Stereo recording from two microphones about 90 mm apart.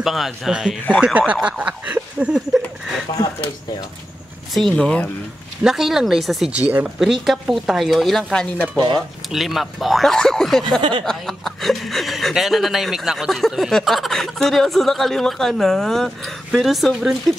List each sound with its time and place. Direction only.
0.0 s speech: centre (ahead or behind)
4.6 s speech: 5° left (ahead or behind)
5.6 s speech: 5° right (ahead or behind)
8.7 s speech: 55° right (ahead or behind)
9.3 s speech: centre (ahead or behind)
10.8 s speech: 70° right (ahead or behind)
11.1 s speech: centre (ahead or behind)